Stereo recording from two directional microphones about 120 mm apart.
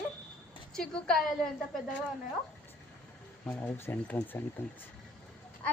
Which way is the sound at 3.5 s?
20° left (ahead or behind).